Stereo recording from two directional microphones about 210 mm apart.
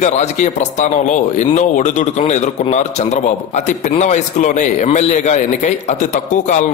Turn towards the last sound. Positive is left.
turn(degrees=35)  # may be behind; listen again after turning